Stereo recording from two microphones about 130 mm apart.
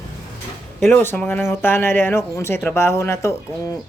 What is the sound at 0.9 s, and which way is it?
Speech, 15° left (ahead or behind).